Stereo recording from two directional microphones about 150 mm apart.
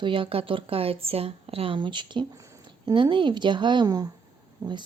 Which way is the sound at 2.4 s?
20° right (ahead or behind).